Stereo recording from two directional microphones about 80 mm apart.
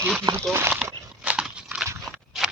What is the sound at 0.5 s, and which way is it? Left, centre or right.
Speech, right.